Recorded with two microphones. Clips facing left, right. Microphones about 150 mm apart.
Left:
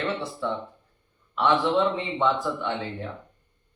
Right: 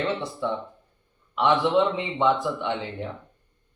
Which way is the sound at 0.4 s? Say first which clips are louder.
Right 1 dB; 15° right (ahead or behind).